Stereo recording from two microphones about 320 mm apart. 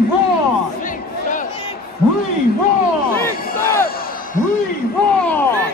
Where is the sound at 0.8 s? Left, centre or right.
Left.